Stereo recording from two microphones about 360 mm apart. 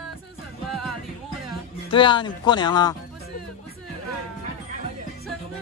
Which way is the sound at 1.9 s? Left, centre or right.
Centre.